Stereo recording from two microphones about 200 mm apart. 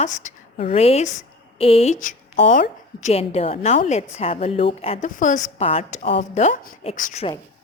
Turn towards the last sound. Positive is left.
turn(degrees=40)  # may be behind; listen again after turning